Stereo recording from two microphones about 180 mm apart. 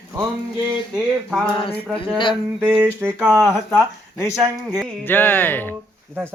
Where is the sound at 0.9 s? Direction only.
5° right (ahead or behind).